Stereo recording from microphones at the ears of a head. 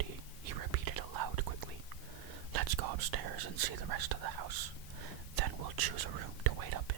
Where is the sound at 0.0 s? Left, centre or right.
Right.